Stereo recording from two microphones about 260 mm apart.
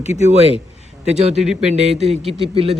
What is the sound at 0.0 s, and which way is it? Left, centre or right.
Speech, left.